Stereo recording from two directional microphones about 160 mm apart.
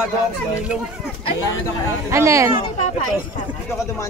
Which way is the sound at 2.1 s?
20° right (ahead or behind).